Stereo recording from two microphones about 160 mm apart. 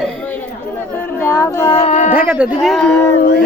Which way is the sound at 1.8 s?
50° left (ahead or behind).